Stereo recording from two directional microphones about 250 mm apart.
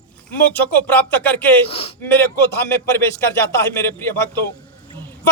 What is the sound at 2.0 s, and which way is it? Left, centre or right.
Speech, centre.